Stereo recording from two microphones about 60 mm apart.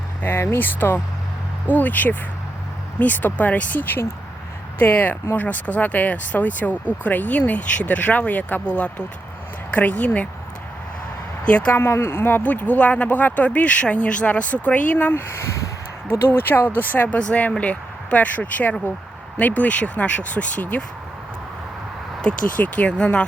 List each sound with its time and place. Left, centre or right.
0.2 s speech: left
11.4 s speech: left
11.7 s speech: left
12.4 s speech: left
15.3 s speech: left
16.0 s speech: left
22.2 s speech: left